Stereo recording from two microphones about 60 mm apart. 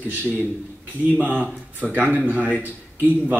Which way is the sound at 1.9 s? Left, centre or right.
Right.